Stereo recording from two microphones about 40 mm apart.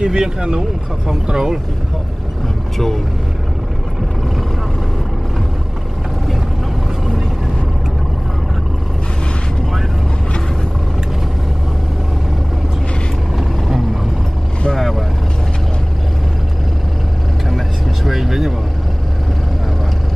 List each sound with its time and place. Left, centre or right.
0.0 s speech: right
13.4 s vehicle: centre
14.8 s speech: centre
18.0 s speech: centre